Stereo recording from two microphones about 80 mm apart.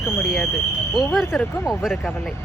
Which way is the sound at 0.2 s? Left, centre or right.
Centre.